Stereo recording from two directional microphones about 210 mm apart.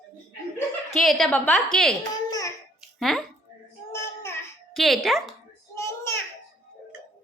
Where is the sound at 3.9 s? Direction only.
15° left (ahead or behind).